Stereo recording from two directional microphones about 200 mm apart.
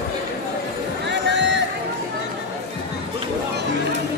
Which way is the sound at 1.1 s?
60° right (ahead or behind).